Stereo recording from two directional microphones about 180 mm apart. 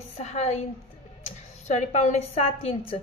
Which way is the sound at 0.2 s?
40° left (ahead or behind).